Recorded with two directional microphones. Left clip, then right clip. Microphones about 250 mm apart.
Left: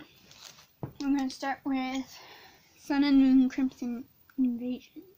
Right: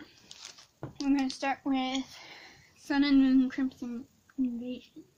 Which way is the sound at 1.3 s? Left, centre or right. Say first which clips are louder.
Right 1 dB; centre.